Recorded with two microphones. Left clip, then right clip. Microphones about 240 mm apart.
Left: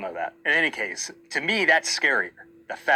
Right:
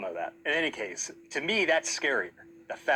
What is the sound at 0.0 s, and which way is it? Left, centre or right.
Speech, left.